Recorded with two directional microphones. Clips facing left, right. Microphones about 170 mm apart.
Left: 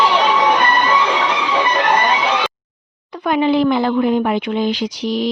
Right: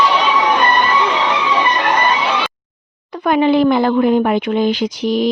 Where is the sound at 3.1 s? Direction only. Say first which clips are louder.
Right 2 dB; 50° right (ahead or behind).